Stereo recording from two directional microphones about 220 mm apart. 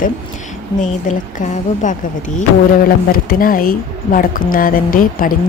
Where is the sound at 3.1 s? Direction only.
40° left (ahead or behind).